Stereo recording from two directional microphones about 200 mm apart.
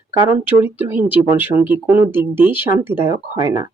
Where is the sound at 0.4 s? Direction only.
10° right (ahead or behind).